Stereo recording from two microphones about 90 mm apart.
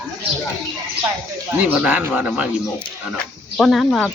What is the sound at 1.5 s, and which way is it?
Speech, 15° right (ahead or behind).